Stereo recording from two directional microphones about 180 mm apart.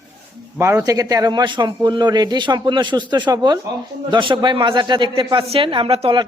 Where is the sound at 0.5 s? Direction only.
15° right (ahead or behind).